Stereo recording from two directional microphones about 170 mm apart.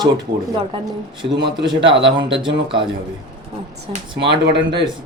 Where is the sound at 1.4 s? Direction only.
25° right (ahead or behind).